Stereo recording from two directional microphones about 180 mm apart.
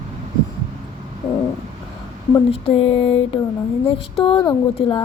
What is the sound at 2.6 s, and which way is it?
Speech, 35° left (ahead or behind).